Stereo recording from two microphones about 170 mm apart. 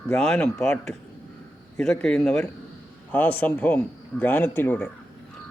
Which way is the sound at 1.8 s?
5° left (ahead or behind).